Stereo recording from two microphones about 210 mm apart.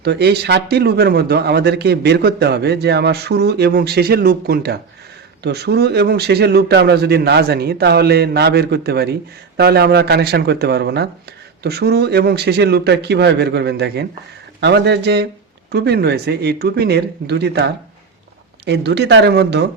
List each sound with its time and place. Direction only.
0.0 s speech: 50° right (ahead or behind)